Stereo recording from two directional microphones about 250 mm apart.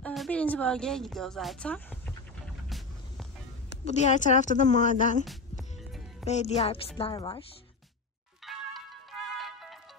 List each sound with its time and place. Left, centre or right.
0.0 s a woman's voice: centre
3.8 s a woman's voice: left
5.2 s music: centre
6.2 s a woman's voice: left
8.5 s music: centre